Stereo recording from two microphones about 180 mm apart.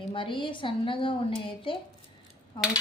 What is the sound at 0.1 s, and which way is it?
A woman's voice, 30° left (ahead or behind).